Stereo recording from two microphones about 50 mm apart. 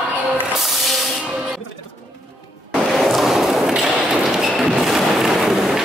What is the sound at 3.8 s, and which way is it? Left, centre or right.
Thump, centre.